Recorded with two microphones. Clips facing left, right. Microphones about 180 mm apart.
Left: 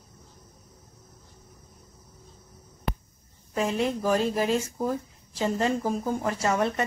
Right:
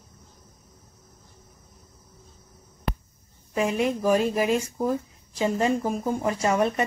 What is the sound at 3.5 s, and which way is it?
Speech, 15° right (ahead or behind).